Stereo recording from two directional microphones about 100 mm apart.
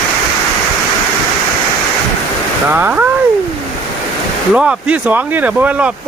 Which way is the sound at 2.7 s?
20° right (ahead or behind).